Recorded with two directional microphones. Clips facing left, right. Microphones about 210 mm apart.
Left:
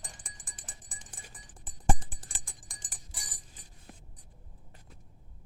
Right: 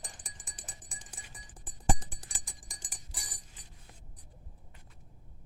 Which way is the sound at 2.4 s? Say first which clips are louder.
Right 1 dB; centre (ahead or behind).